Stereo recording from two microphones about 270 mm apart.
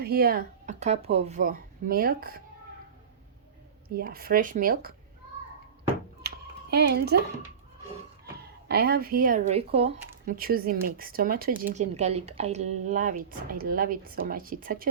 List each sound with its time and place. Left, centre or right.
0.0 s speech: right
3.8 s speech: right
6.2 s a sound: right
8.6 s speech: right
9.9 s speech: right